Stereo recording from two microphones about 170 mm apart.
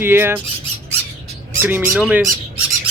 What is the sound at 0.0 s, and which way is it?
Speech, 15° right (ahead or behind).